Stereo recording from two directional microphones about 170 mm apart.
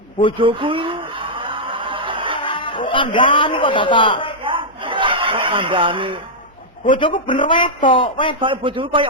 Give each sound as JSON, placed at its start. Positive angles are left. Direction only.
{"t": 0.3, "sound": "speech", "side_deg": -30}
{"t": 1.5, "sound": "a sound", "side_deg": -30}
{"t": 2.4, "sound": "a man's voice", "side_deg": 30}
{"t": 4.4, "sound": "chuckle", "side_deg": -30}
{"t": 6.9, "sound": "speech", "side_deg": 30}
{"t": 8.4, "sound": "speech", "side_deg": -30}